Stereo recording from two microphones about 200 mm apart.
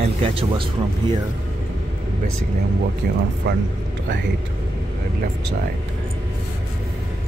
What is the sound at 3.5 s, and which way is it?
Speech, 60° right (ahead or behind).